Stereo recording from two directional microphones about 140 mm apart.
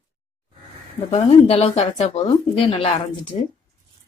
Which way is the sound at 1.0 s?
45° left (ahead or behind).